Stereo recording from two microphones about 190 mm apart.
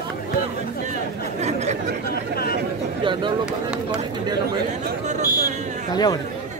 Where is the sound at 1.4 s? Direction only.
35° right (ahead or behind).